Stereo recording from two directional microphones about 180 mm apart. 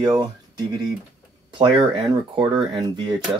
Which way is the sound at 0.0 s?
25° right (ahead or behind).